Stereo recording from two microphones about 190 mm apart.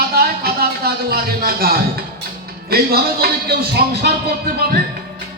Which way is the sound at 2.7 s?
55° right (ahead or behind).